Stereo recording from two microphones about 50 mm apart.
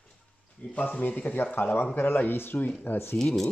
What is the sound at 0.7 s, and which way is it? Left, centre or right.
Speech, left.